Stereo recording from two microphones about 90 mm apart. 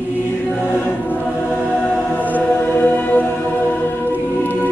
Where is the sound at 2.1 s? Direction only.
20° left (ahead or behind).